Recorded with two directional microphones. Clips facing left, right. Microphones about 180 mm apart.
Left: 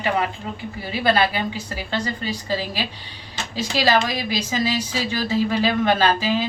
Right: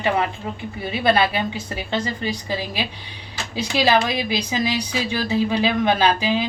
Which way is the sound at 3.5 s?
15° right (ahead or behind).